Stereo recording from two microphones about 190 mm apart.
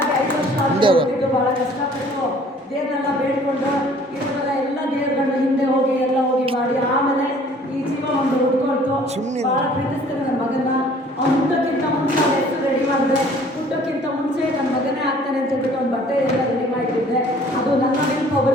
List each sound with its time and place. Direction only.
0.8 s a woman's voice: 25° right (ahead or behind)